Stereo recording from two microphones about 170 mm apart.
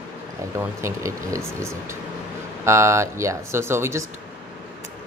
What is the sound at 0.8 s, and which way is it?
Speech, 15° right (ahead or behind).